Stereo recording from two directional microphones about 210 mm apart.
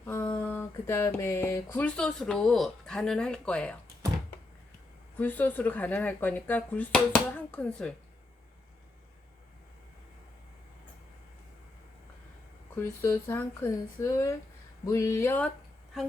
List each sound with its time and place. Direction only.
0.0 s speech: 10° left (ahead or behind)
5.1 s speech: 10° left (ahead or behind)
12.7 s speech: 10° left (ahead or behind)